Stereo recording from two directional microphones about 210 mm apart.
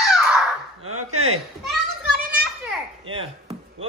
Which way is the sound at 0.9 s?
90° right.